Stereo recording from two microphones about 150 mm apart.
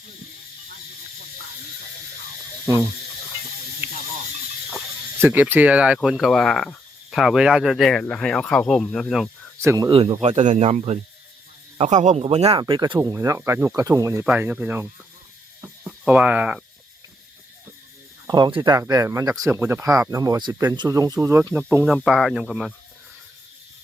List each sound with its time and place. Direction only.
5.2 s speech: 10° right (ahead or behind)
9.6 s speech: 20° right (ahead or behind)
9.9 s speech: 40° right (ahead or behind)
12.5 s speech: 30° right (ahead or behind)
14.3 s speech: 10° right (ahead or behind)
15.9 s speech: 5° right (ahead or behind)
18.3 s speech: 30° right (ahead or behind); by 21.9 s 15° right (ahead or behind)
21.9 s speech: centre (ahead or behind)